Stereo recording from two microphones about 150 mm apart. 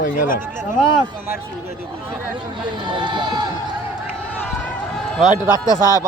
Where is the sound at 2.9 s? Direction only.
30° right (ahead or behind).